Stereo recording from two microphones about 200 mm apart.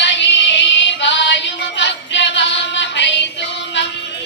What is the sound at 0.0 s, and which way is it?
Music, 60° left (ahead or behind).